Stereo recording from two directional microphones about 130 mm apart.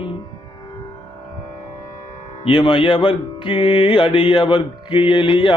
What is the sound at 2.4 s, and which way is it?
Mantra, 40° left (ahead or behind).